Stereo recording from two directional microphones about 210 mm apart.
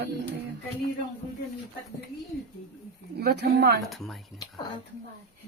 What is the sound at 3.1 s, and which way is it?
Speech, 50° right (ahead or behind).